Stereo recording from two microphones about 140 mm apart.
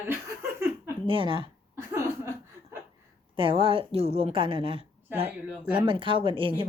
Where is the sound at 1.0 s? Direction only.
40° right (ahead or behind).